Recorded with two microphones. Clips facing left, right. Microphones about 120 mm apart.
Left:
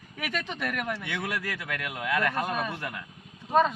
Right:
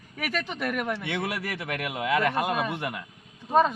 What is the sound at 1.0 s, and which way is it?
Speech, 25° right (ahead or behind).